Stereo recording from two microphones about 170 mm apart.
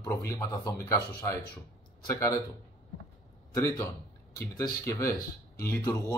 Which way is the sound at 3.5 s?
20° left (ahead or behind).